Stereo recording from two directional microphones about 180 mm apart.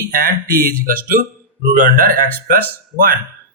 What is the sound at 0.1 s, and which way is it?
Speech, 50° right (ahead or behind).